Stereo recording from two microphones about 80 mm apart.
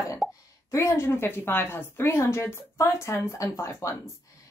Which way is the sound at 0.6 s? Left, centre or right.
Left.